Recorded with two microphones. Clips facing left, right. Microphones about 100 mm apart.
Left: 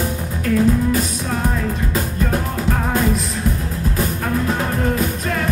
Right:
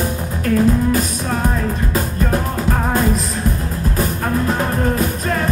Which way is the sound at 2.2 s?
40° right (ahead or behind).